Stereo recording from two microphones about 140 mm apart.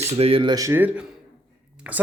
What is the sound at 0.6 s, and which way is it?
Speech, 15° right (ahead or behind).